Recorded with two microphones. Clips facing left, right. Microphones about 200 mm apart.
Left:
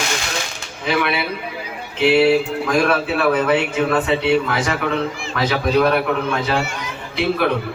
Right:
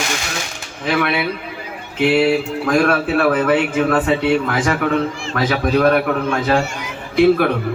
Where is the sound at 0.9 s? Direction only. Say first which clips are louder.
Right 2 dB; 50° right (ahead or behind).